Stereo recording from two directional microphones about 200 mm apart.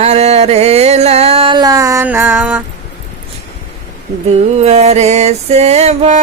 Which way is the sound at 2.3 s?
5° right (ahead or behind).